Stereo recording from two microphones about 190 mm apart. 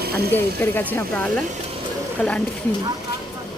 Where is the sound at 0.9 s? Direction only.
10° left (ahead or behind).